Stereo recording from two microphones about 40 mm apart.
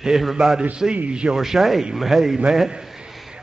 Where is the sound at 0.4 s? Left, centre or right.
Centre.